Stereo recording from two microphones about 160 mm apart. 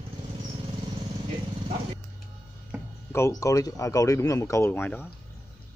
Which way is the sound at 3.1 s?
20° left (ahead or behind).